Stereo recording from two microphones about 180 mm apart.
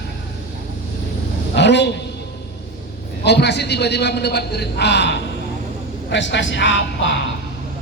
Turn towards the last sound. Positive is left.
turn(degrees=90)